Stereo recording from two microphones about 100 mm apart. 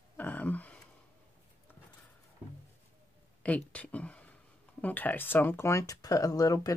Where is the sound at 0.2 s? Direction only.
15° left (ahead or behind).